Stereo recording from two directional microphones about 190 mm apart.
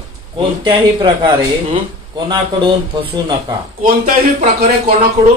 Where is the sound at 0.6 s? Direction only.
25° right (ahead or behind).